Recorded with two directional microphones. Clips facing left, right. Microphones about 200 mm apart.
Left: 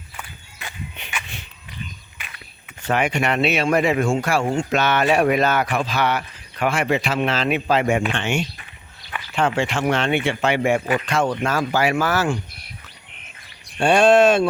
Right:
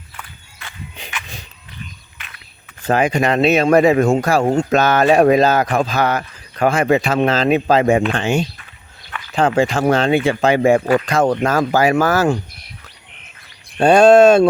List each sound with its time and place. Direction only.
3.2 s speech: 35° right (ahead or behind)
13.7 s speech: 40° right (ahead or behind)